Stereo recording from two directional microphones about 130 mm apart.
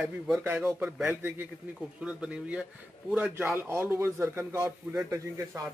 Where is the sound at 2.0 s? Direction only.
5° right (ahead or behind); by 5.6 s 25° right (ahead or behind).